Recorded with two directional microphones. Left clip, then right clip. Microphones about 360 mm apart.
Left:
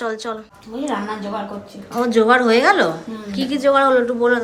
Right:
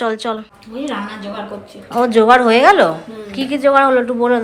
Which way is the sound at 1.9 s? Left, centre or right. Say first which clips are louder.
Right 4 dB; centre.